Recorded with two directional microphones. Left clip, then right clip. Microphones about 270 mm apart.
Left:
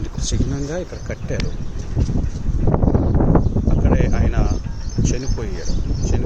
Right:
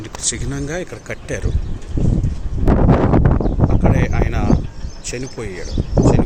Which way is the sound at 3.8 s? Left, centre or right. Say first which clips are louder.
Even; centre.